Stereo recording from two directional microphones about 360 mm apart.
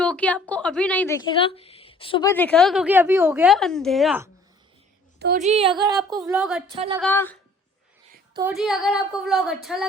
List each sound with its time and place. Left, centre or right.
0.0 s a woman's voice: centre
5.2 s a woman's voice: right; by 6.6 s centre
6.7 s a woman's voice: centre
7.0 s a woman's voice: centre
8.3 s a woman's voice: centre